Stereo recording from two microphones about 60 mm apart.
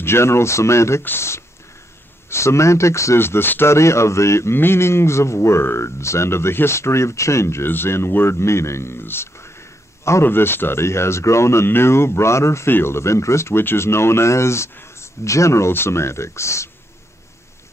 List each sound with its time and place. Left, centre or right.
0.0 s speech: left
3.2 s speech: left
3.7 s speech: left
12.6 s speech: left